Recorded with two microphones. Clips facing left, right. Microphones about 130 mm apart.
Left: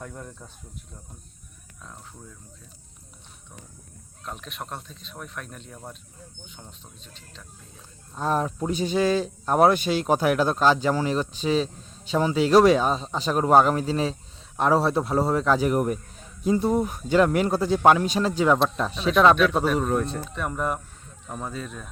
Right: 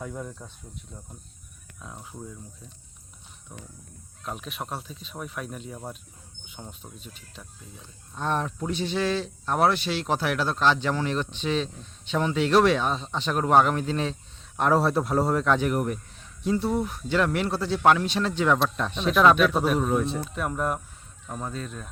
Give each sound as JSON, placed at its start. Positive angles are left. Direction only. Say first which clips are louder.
{"t": 0.0, "sound": "speech", "louder": "right 3 dB", "side_deg": -5}
{"t": 1.8, "sound": "speech", "louder": "right 2 dB", "side_deg": -10}
{"t": 4.3, "sound": "speech", "louder": "right 2 dB", "side_deg": -5}
{"t": 8.1, "sound": "speech", "louder": "left 3 dB", "side_deg": 5}
{"t": 8.7, "sound": "speech", "louder": "left 4 dB", "side_deg": 40}
{"t": 10.8, "sound": "speech", "louder": "left 3 dB", "side_deg": 10}
{"t": 12.5, "sound": "speech", "louder": "left 4 dB", "side_deg": 40}
{"t": 13.7, "sound": "speech", "louder": "left 3 dB", "side_deg": 5}
{"t": 15.7, "sound": "a sound", "louder": "left 3 dB", "side_deg": 35}
{"t": 16.6, "sound": "speech", "louder": "left 4 dB", "side_deg": 20}
{"t": 17.3, "sound": "speech", "louder": "left 4 dB", "side_deg": 45}
{"t": 18.3, "sound": "speech", "louder": "left 3 dB", "side_deg": 10}